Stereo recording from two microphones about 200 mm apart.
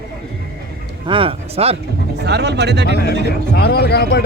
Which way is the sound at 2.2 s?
55° right (ahead or behind).